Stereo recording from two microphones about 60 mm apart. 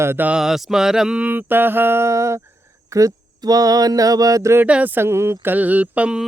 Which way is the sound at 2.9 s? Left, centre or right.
Right.